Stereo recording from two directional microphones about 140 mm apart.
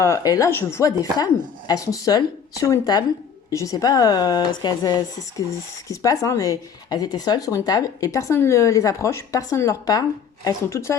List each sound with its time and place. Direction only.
0.2 s speech: 25° left (ahead or behind)